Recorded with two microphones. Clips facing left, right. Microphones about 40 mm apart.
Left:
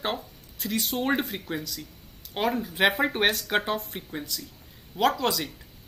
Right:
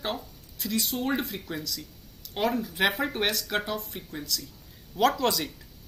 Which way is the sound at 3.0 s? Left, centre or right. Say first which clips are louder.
Left 4 dB; left.